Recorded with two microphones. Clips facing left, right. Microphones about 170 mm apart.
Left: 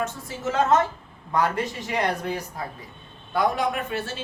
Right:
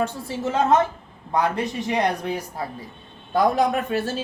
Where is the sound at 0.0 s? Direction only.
30° right (ahead or behind).